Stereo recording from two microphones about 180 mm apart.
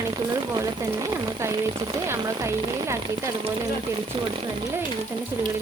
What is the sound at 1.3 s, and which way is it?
Speech, 15° right (ahead or behind).